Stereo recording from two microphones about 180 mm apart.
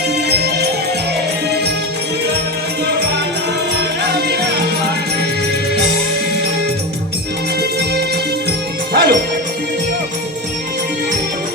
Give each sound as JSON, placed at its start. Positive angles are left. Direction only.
{"t": 0.3, "sound": "music", "side_deg": -65}
{"t": 3.8, "sound": "music", "side_deg": -65}
{"t": 7.6, "sound": "music", "side_deg": -65}